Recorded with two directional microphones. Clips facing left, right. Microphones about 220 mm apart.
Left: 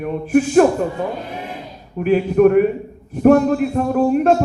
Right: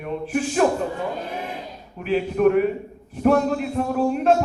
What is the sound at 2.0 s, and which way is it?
Speech, 45° left (ahead or behind).